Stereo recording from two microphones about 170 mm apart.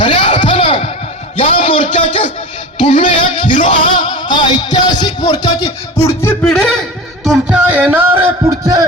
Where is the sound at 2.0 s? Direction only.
35° left (ahead or behind).